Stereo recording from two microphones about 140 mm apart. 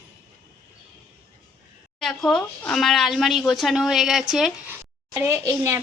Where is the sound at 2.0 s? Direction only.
5° left (ahead or behind).